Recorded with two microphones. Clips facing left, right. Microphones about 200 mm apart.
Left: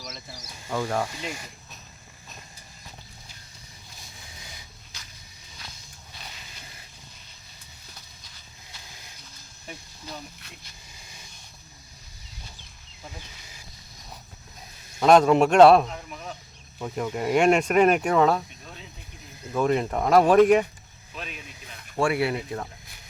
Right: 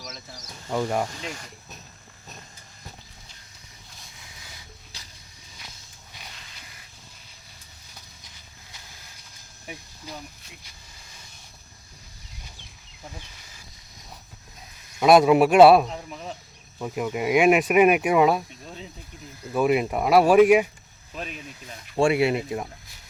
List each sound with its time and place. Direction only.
0.0 s speech: 5° left (ahead or behind)
0.7 s speech: 10° right (ahead or behind)
1.0 s speech: 10° left (ahead or behind)
10.1 s speech: 10° right (ahead or behind)
14.9 s speech: 10° right (ahead or behind)
19.5 s speech: 10° right (ahead or behind)
21.9 s speech: 20° right (ahead or behind)